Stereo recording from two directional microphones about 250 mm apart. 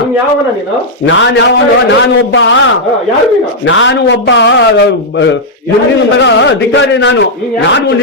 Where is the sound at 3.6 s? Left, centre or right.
Left.